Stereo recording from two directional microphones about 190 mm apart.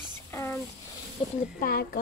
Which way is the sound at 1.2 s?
30° left (ahead or behind).